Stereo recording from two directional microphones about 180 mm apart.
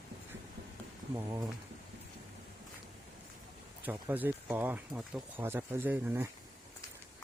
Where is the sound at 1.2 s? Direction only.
15° right (ahead or behind).